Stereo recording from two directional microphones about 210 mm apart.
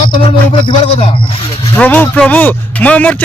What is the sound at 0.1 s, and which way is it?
Music, 25° left (ahead or behind).